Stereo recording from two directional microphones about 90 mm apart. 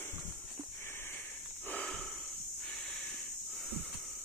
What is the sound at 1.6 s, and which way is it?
Snort, 10° left (ahead or behind).